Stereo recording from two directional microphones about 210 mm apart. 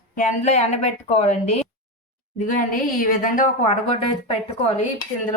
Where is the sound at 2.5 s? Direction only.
40° left (ahead or behind).